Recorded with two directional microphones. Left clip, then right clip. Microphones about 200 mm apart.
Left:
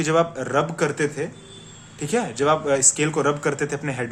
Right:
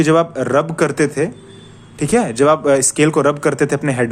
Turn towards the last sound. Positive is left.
turn(degrees=-35)  # may be behind; listen again after turning